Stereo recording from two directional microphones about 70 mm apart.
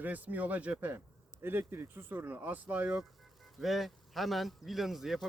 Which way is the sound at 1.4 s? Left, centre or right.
Right.